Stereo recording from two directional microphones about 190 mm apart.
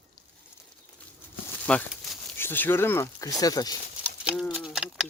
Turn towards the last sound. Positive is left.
turn(degrees=-5)  # may be behind; listen again after turning